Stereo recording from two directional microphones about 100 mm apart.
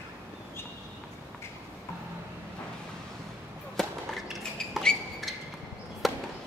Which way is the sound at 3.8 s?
Centre (ahead or behind).